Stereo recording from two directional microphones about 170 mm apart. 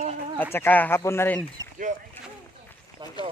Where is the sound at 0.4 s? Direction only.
10° left (ahead or behind).